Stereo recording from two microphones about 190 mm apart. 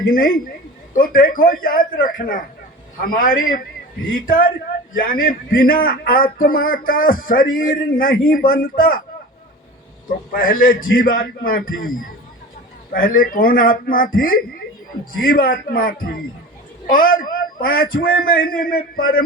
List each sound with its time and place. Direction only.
0.1 s a man's voice: 50° left (ahead or behind)
10.3 s a man's voice: 50° left (ahead or behind)